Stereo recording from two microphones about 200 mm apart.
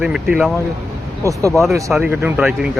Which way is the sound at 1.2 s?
15° right (ahead or behind).